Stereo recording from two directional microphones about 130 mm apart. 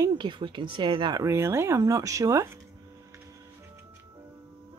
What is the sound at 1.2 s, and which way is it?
Speech, 20° right (ahead or behind).